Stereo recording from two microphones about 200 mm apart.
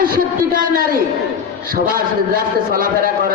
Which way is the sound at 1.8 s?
45° right (ahead or behind).